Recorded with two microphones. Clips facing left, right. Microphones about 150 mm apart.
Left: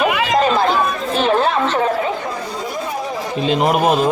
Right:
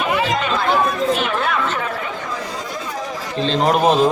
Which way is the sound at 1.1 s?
35° left (ahead or behind).